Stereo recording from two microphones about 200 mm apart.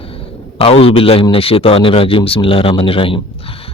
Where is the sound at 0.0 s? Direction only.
30° left (ahead or behind).